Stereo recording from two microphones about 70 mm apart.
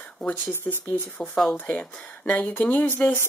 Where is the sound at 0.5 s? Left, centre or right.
Left.